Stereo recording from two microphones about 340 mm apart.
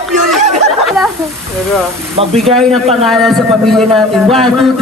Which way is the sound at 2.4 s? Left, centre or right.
Centre.